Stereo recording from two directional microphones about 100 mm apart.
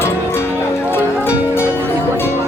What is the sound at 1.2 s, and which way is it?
Music, 10° right (ahead or behind).